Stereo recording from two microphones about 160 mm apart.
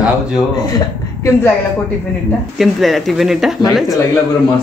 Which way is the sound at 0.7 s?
15° left (ahead or behind).